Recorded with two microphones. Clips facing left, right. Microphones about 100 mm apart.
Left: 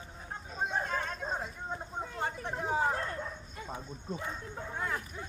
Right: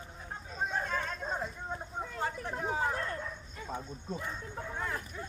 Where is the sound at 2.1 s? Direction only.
25° left (ahead or behind).